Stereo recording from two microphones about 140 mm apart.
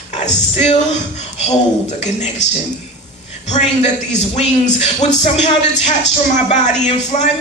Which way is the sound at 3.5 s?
55° left (ahead or behind).